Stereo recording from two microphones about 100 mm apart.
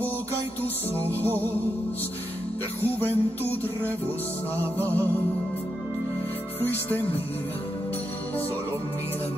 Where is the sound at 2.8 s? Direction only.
20° left (ahead or behind).